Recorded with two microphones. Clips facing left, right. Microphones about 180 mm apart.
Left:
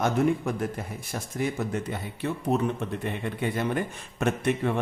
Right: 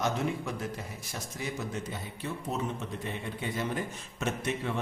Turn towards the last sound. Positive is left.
turn(degrees=55)  # may be behind; listen again after turning